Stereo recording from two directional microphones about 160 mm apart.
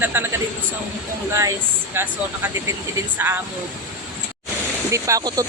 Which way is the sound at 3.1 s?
15° right (ahead or behind).